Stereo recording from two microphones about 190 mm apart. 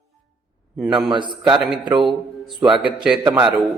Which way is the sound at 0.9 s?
25° right (ahead or behind).